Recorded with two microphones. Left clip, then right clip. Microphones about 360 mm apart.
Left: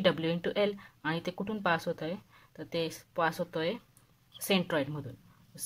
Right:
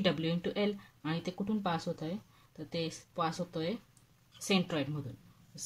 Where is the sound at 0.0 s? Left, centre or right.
Centre.